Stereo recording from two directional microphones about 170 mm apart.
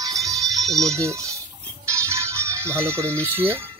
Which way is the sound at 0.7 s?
20° right (ahead or behind).